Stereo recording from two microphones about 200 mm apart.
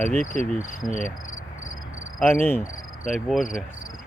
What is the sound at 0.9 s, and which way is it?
Cricket, 40° left (ahead or behind).